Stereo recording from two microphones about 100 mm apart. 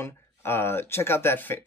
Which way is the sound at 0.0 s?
25° left (ahead or behind).